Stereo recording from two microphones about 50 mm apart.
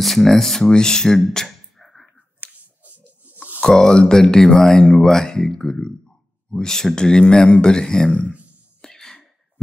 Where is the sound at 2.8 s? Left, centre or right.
Right.